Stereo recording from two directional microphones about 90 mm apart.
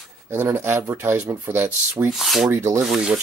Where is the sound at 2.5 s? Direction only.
30° right (ahead or behind).